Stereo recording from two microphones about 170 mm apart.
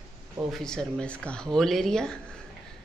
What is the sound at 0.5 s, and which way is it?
Speech, 5° left (ahead or behind).